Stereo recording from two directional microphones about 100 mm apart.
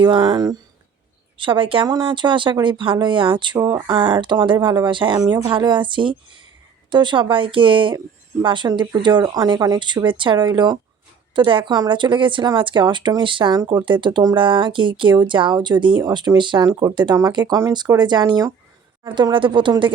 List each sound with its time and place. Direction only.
0.0 s speech: 45° right (ahead or behind)
1.4 s speech: 60° right (ahead or behind); by 18.5 s 40° right (ahead or behind)
19.0 s speech: 55° right (ahead or behind)